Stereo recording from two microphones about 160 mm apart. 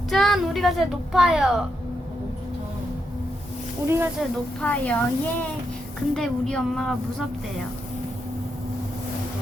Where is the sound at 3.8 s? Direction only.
15° right (ahead or behind).